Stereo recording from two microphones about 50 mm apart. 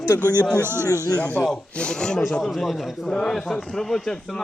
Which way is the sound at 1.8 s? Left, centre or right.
Centre.